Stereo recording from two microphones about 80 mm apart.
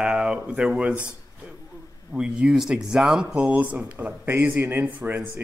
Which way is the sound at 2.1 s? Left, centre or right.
Centre.